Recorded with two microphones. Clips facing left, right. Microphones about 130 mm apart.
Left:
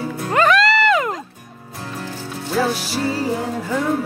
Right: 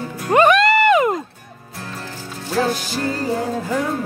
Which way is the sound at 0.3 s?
20° right (ahead or behind).